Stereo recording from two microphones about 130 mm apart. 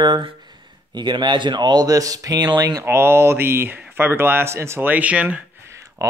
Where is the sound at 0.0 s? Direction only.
35° right (ahead or behind); by 5.4 s 10° right (ahead or behind).